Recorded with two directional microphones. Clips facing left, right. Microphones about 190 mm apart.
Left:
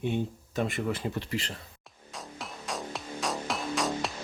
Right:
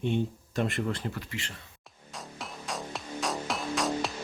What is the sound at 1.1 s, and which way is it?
Speech, 35° left (ahead or behind).